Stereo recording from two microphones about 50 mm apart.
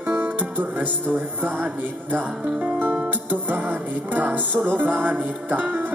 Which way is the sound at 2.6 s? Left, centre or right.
Right.